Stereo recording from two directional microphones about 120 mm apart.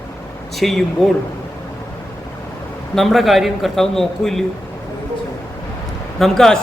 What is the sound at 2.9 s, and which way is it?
A man's voice, centre (ahead or behind).